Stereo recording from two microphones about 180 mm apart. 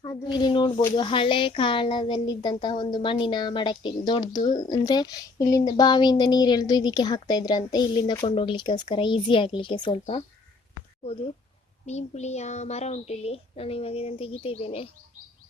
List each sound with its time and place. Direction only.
0.0 s speech: 25° left (ahead or behind)
10.8 s a sound: 35° left (ahead or behind)
11.9 s a woman's voice: 40° left (ahead or behind)